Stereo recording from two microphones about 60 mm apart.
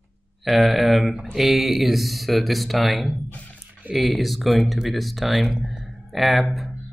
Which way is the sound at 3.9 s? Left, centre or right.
Centre.